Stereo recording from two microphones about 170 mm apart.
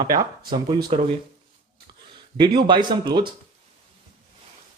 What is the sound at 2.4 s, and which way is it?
Speech, 25° right (ahead or behind).